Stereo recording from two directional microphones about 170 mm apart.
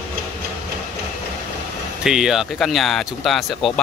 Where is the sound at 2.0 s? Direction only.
Centre (ahead or behind).